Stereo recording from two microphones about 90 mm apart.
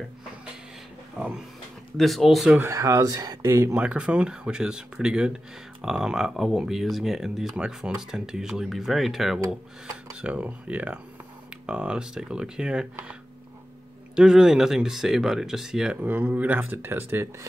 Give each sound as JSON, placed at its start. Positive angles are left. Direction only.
{"t": 2.0, "sound": "speech", "side_deg": 0}
{"t": 2.6, "sound": "speech", "side_deg": -35}
{"t": 3.7, "sound": "speech", "side_deg": -15}
{"t": 10.2, "sound": "speech", "side_deg": -15}
{"t": 14.1, "sound": "speech", "side_deg": -5}
{"t": 16.0, "sound": "speech", "side_deg": -20}